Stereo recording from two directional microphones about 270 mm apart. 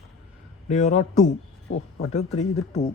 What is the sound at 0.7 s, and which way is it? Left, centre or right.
Speech, left.